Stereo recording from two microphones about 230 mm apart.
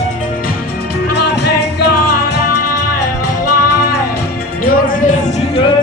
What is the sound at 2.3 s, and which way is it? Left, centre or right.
Music, left.